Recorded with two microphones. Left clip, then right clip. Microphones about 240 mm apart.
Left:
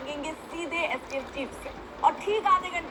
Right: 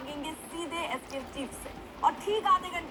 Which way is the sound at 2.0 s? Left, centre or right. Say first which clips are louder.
Left 3 dB; right.